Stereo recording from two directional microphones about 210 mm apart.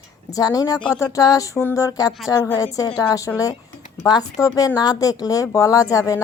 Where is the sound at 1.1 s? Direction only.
15° left (ahead or behind).